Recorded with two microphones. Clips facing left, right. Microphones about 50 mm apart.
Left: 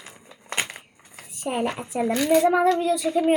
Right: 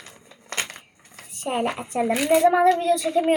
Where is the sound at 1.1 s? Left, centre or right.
Right.